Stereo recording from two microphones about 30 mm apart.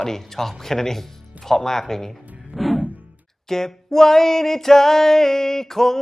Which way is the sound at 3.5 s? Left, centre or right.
Centre.